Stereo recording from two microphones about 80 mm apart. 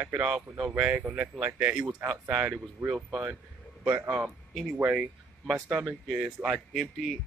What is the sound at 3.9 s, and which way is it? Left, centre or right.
Speech, right.